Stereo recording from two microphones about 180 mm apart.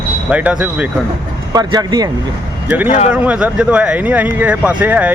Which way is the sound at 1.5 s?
20° right (ahead or behind).